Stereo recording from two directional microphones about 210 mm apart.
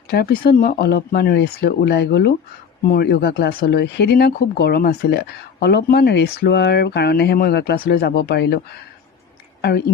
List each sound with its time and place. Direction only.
0.1 s speech: 50° left (ahead or behind)